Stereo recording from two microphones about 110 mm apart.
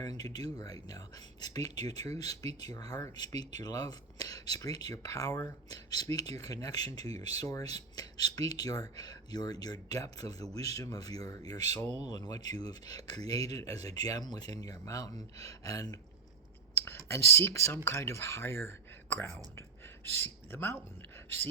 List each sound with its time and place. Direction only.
0.0 s speech: 35° left (ahead or behind)
16.8 s speech: 20° left (ahead or behind)